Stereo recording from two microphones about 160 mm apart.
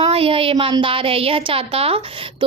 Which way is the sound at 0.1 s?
35° right (ahead or behind).